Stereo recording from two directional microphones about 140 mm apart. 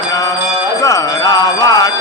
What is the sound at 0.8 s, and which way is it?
Music, 25° left (ahead or behind).